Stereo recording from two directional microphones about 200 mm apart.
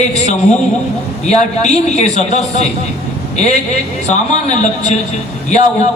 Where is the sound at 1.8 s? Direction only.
35° left (ahead or behind).